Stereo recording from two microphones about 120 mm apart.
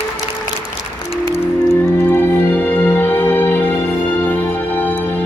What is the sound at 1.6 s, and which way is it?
Music, 20° left (ahead or behind).